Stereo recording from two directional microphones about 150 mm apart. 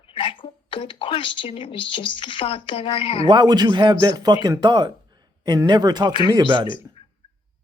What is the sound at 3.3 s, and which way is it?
Speech, 30° right (ahead or behind).